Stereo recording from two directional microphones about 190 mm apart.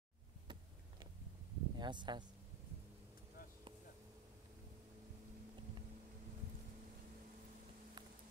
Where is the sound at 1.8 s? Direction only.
25° right (ahead or behind).